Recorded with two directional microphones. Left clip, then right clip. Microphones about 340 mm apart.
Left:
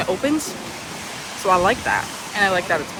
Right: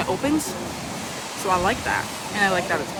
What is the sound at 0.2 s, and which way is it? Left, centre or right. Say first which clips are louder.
Speech: left 2 dB; centre.